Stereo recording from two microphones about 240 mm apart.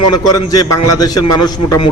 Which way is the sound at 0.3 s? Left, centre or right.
Centre.